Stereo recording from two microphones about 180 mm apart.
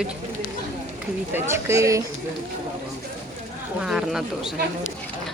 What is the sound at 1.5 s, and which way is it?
Speech, 15° right (ahead or behind).